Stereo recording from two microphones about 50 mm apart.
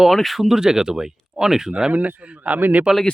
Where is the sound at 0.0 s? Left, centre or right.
Centre.